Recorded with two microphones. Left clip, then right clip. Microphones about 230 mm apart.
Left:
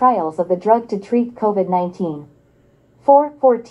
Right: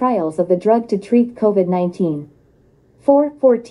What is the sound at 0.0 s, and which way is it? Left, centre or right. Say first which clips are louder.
A woman's voice: left 2 dB; right.